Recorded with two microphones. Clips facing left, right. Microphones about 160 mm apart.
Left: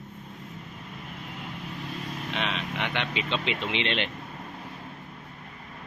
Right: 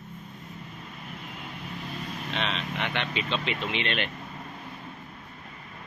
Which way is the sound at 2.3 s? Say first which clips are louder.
Even; 10° left (ahead or behind).